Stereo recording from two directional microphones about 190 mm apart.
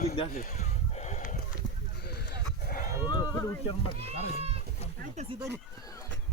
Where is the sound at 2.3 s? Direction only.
50° left (ahead or behind).